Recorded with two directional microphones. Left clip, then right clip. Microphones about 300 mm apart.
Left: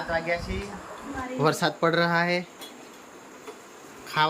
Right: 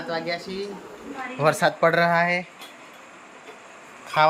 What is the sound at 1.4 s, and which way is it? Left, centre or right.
Speech, centre.